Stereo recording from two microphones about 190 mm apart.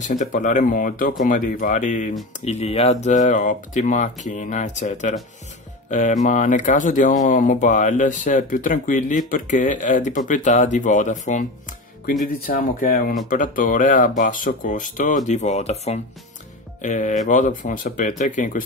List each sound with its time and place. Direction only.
0.1 s speech: 40° left (ahead or behind)